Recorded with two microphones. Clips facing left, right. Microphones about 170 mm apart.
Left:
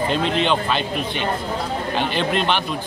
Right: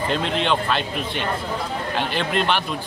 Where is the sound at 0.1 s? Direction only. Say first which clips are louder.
Even; centre (ahead or behind).